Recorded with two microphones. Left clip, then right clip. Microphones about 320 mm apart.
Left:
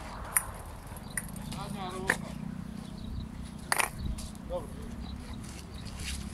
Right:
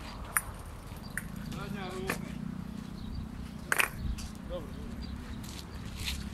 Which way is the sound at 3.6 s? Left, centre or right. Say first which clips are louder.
Right 1 dB; centre.